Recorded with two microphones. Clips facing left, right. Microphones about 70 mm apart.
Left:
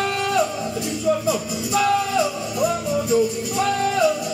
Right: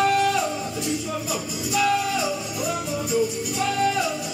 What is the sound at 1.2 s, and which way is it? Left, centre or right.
Music, left.